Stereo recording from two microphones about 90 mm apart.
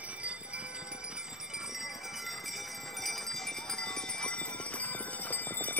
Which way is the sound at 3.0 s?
Centre (ahead or behind).